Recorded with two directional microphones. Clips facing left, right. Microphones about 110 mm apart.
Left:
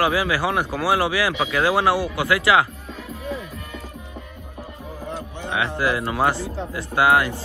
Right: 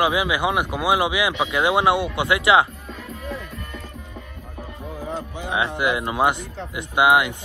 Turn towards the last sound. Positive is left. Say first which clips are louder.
# even
turn(degrees=-15)  # may be behind; listen again after turning